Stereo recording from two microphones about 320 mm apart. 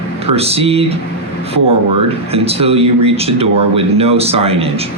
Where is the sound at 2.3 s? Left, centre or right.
Centre.